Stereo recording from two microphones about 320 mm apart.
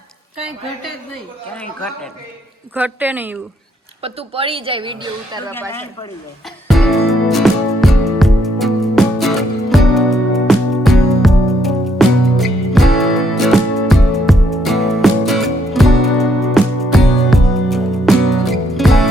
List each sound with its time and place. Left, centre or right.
2.7 s a woman's voice: centre
4.0 s a woman's voice: centre
6.7 s music: centre